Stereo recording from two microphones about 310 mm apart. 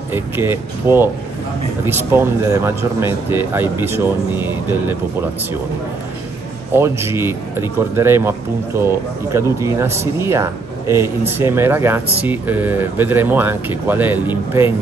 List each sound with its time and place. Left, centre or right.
0.1 s a man's voice: centre
6.7 s a man's voice: centre